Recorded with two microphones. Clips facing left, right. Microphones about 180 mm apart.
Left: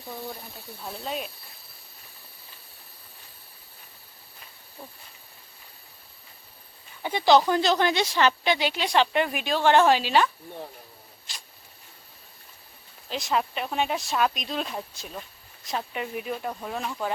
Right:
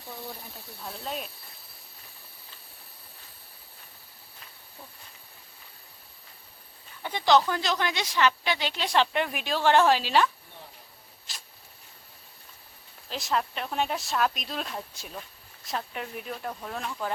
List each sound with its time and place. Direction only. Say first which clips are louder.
1.0 s speech: left 3 dB; 5° left (ahead or behind)
7.0 s speech: left 3 dB; 10° left (ahead or behind); by 8.4 s 30° left (ahead or behind)
8.4 s speech: left 5 dB; 10° left (ahead or behind)
11.3 s a sound: left 1 dB; centre (ahead or behind)
13.1 s speech: left 2 dB; centre (ahead or behind)